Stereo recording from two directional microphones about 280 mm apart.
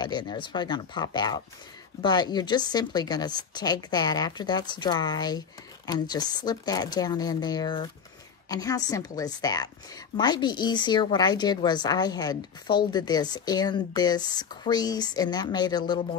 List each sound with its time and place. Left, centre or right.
0.0 s a woman's voice: centre